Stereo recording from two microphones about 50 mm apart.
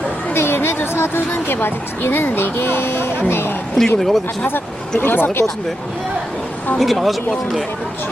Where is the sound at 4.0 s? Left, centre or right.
Centre.